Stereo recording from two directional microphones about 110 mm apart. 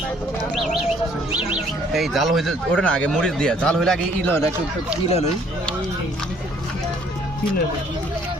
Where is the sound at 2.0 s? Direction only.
Centre (ahead or behind).